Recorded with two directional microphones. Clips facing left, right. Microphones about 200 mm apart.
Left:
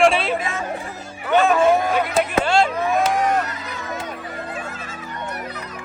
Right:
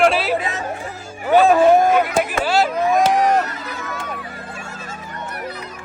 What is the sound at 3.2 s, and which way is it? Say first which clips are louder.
Music: right 3 dB; 40° right (ahead or behind).